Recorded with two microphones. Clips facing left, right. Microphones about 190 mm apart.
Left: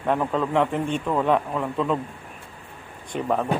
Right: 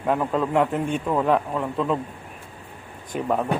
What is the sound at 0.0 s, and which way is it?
A man's voice, 5° right (ahead or behind).